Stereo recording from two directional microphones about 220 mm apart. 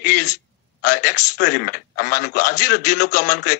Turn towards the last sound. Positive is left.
turn(degrees=35)  # may be behind; listen again after turning